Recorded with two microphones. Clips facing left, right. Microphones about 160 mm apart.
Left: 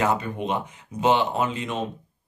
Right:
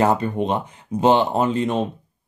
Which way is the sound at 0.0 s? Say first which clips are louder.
Right 5 dB; 35° right (ahead or behind).